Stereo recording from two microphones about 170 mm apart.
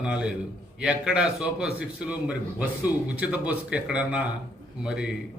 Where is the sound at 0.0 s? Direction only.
5° right (ahead or behind).